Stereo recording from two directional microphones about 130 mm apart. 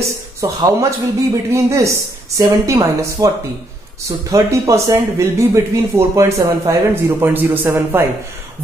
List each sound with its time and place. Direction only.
0.4 s speech: 25° right (ahead or behind)
4.3 s speech: 25° right (ahead or behind)